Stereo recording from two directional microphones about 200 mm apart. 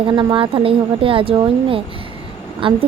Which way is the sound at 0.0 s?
20° right (ahead or behind).